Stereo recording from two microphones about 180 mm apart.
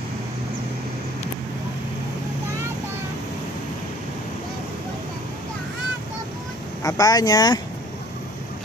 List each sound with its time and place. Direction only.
6.8 s speech: 20° left (ahead or behind)